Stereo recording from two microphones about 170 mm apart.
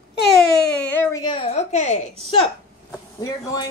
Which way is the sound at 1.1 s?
30° left (ahead or behind).